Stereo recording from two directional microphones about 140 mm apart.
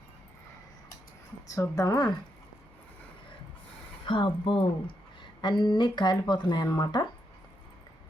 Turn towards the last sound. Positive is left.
turn(degrees=30)  # may be behind; listen again after turning